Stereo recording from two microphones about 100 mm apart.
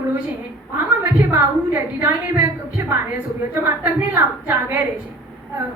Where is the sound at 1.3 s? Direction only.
20° right (ahead or behind).